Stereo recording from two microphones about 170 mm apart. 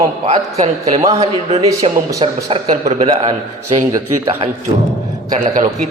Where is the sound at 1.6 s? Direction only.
20° right (ahead or behind).